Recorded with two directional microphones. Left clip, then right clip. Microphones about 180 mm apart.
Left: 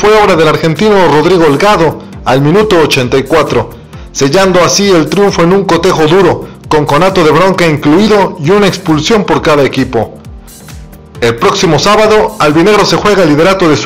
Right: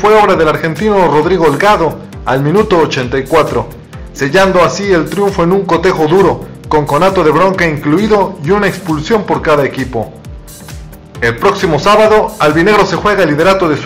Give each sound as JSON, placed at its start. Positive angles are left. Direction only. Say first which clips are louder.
{"t": 0.0, "sound": "a man's voice", "louder": "left 2 dB", "side_deg": 30}
{"t": 11.1, "sound": "a man's voice", "louder": "left 3 dB", "side_deg": 30}